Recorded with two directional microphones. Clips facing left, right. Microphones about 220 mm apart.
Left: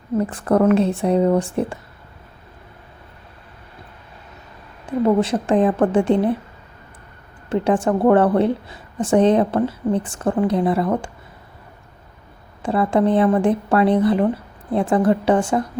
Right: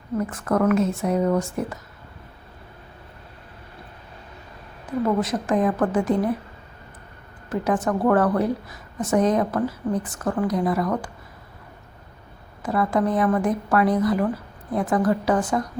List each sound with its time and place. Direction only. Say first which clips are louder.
0.2 s speech: left 5 dB; 30° left (ahead or behind)
4.9 s a woman's voice: left 5 dB; 30° left (ahead or behind)
7.5 s a woman's voice: left 5 dB; 30° left (ahead or behind)
12.6 s a woman's voice: left 4 dB; 30° left (ahead or behind)